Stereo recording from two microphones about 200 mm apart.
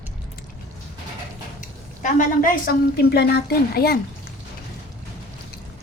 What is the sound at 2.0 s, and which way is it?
A woman's voice, 40° left (ahead or behind).